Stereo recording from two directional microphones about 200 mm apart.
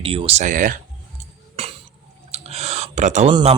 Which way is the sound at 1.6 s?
30° right (ahead or behind).